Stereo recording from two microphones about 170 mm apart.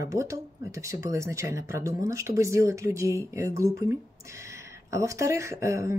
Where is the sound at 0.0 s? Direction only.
20° right (ahead or behind).